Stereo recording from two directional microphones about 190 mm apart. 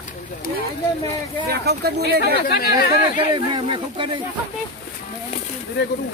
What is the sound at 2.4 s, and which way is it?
Speech, 55° left (ahead or behind).